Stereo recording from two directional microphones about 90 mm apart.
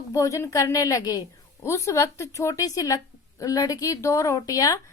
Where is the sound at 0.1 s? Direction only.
40° left (ahead or behind).